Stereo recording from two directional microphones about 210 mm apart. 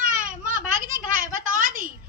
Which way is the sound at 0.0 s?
40° right (ahead or behind).